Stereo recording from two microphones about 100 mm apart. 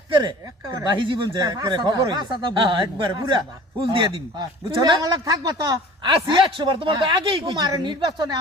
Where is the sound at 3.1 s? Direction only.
45° right (ahead or behind).